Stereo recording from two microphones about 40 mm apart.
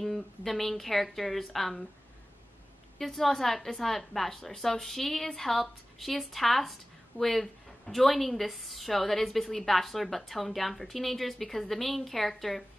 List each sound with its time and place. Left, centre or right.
0.0 s a woman's voice: centre
3.0 s a woman's voice: centre